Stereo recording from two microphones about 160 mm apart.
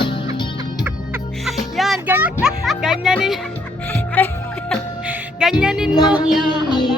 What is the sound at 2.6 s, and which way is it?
Music, 5° right (ahead or behind).